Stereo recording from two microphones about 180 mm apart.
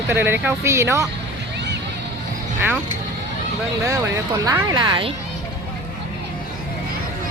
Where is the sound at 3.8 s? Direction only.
20° right (ahead or behind).